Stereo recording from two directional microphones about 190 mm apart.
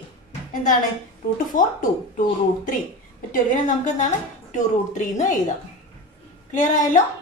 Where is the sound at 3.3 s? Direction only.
45° left (ahead or behind).